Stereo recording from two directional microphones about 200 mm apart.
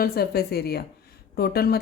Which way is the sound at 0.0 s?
50° left (ahead or behind).